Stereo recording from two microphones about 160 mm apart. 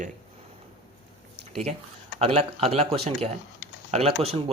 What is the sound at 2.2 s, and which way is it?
Speech, 40° right (ahead or behind).